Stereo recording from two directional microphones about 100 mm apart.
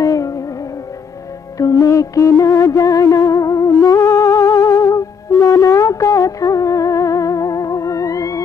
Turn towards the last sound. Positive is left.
turn(degrees=35)  # may be behind; listen again after turning